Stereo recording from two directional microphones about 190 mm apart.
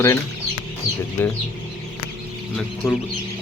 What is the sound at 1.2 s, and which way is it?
Speech, 10° left (ahead or behind).